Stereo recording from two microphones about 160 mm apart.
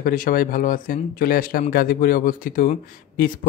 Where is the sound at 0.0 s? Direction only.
60° left (ahead or behind).